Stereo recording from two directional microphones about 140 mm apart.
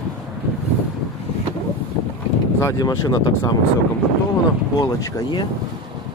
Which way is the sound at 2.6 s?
25° left (ahead or behind).